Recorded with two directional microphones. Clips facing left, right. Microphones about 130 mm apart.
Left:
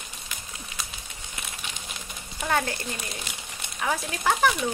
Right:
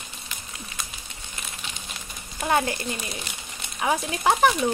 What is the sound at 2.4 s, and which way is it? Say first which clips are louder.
Speech: right 3 dB; 20° right (ahead or behind).